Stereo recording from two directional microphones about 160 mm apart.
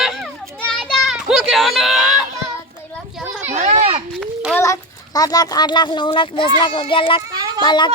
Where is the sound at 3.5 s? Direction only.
45° right (ahead or behind).